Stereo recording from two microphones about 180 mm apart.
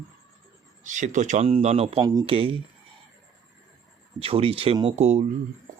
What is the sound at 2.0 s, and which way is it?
Speech, 20° right (ahead or behind).